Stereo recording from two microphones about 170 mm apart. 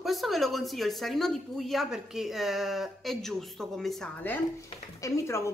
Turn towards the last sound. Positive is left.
turn(degrees=15)  # may be behind; listen again after turning